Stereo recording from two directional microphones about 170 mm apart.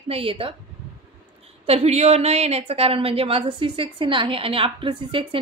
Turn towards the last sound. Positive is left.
turn(degrees=-30)  # may be behind; listen again after turning